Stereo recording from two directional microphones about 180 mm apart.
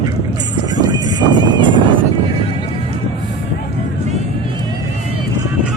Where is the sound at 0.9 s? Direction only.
25° right (ahead or behind).